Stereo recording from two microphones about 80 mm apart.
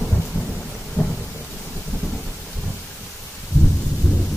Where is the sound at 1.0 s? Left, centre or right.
Centre.